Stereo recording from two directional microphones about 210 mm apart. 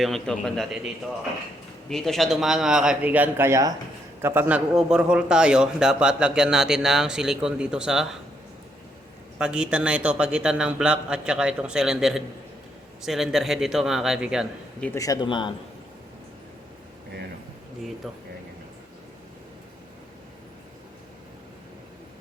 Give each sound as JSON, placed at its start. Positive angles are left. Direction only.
{"t": 0.0, "sound": "a man's voice", "side_deg": 0}
{"t": 1.9, "sound": "a man's voice", "side_deg": 0}
{"t": 9.4, "sound": "a man's voice", "side_deg": -5}
{"t": 14.8, "sound": "speech", "side_deg": 15}